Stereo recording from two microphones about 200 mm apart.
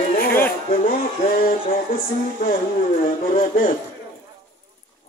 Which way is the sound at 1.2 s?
45° left (ahead or behind).